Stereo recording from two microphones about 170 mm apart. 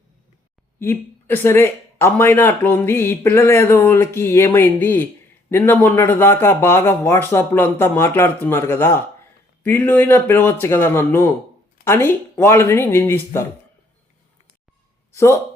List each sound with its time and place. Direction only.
0.8 s speech: 15° left (ahead or behind)
15.1 s speech: 15° left (ahead or behind)